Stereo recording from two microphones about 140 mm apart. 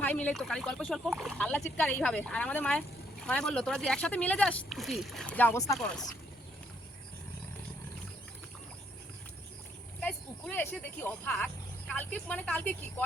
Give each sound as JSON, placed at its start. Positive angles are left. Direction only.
{"t": 0.0, "sound": "speech", "side_deg": 10}
{"t": 5.5, "sound": "speech", "side_deg": 25}
{"t": 10.0, "sound": "speech", "side_deg": 10}